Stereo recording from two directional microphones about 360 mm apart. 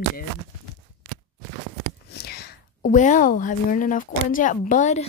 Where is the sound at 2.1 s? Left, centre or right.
Left.